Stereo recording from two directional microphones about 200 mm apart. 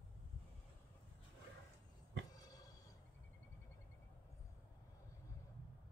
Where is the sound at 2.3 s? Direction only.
20° left (ahead or behind).